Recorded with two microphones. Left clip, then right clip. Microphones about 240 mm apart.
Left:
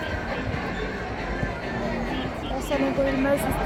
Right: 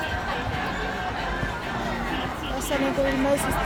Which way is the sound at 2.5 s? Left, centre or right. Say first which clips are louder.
Even; right.